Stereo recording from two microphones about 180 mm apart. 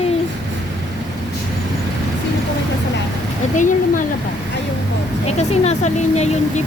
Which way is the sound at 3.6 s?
45° left (ahead or behind).